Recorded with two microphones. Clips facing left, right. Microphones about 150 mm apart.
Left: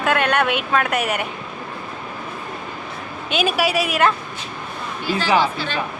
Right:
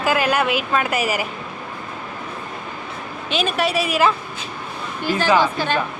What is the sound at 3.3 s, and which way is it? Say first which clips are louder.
Speech: left 1 dB; centre (ahead or behind).